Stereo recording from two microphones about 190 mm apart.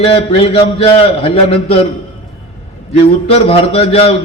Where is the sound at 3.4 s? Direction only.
30° left (ahead or behind).